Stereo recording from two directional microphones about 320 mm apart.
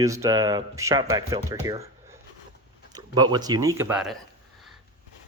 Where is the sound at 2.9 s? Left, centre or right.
Centre.